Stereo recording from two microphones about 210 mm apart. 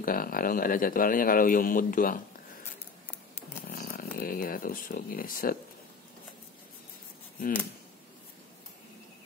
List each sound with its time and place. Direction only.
0.0 s speech: 45° left (ahead or behind)
3.1 s a sound: 5° left (ahead or behind)
3.6 s speech: 45° left (ahead or behind)